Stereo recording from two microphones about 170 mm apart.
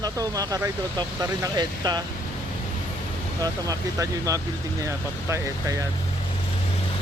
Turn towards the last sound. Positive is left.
turn(degrees=-15)  # may be behind; listen again after turning